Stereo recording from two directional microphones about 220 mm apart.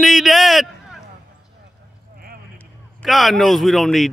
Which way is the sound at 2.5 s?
Centre (ahead or behind).